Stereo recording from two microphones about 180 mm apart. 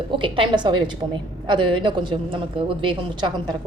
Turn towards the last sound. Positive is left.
turn(degrees=-25)  # may be behind; listen again after turning